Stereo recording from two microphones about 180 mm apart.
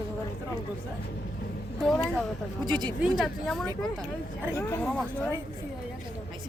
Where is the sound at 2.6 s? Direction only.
25° right (ahead or behind).